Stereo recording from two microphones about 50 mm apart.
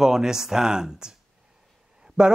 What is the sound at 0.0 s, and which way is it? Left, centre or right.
Speech, centre.